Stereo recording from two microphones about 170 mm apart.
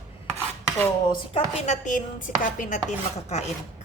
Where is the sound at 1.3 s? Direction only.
45° left (ahead or behind).